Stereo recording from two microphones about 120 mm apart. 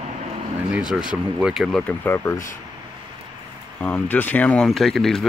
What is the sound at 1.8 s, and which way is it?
Speech, 15° left (ahead or behind).